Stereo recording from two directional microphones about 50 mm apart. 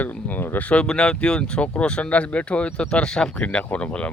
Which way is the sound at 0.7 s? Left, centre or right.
Centre.